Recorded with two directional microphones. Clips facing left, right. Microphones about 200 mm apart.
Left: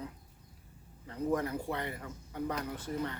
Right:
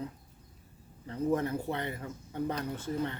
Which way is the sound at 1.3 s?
25° right (ahead or behind).